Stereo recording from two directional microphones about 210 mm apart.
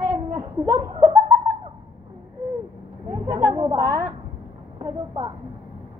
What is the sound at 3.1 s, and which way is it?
A woman's voice, 15° right (ahead or behind).